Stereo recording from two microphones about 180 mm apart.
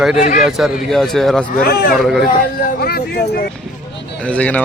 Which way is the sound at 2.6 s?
60° left (ahead or behind).